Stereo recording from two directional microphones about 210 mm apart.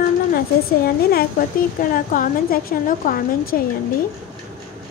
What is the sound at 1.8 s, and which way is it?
A woman's voice, 40° left (ahead or behind).